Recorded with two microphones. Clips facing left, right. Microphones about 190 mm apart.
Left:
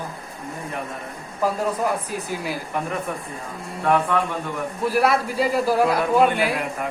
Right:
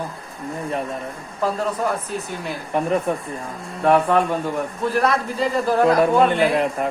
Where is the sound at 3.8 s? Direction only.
35° right (ahead or behind).